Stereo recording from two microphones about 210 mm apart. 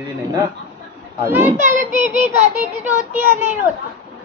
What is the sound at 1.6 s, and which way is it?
A child's voice, 35° right (ahead or behind).